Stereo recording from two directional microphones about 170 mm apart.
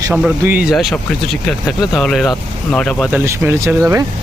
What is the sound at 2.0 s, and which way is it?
Speech, centre (ahead or behind).